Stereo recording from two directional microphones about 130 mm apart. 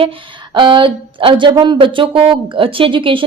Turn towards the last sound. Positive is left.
turn(degrees=-40)  # may be behind; listen again after turning